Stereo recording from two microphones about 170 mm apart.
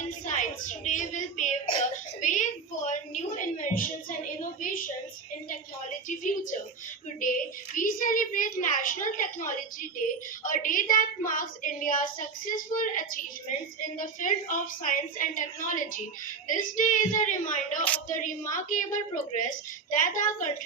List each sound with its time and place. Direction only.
0.3 s a woman's voice: 45° left (ahead or behind)
2.2 s a sound: 45° left (ahead or behind)
6.1 s a woman's voice: 50° left (ahead or behind)
7.8 s a woman's voice: 50° left (ahead or behind)